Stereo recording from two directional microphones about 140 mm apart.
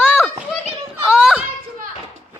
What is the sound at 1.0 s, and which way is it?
Children playing, 5° right (ahead or behind).